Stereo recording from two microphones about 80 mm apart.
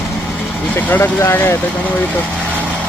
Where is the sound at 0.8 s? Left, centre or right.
Left.